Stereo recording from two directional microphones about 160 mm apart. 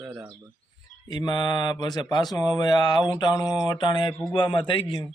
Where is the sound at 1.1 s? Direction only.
25° left (ahead or behind).